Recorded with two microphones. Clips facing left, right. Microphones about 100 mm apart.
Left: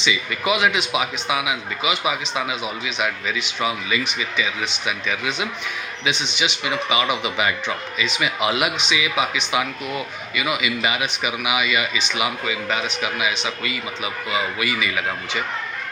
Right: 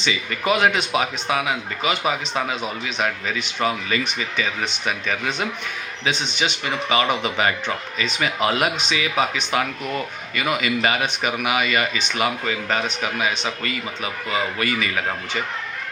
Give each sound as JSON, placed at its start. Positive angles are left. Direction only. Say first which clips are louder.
{"t": 0.0, "sound": "speech", "louder": "left 1 dB", "side_deg": -40}
{"t": 9.8, "sound": "speech", "louder": "right 1 dB", "side_deg": 5}
{"t": 10.3, "sound": "speech", "louder": "right 1 dB", "side_deg": -45}